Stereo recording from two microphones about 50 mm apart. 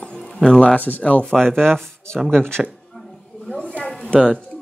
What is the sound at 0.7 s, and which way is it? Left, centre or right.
Speech, left.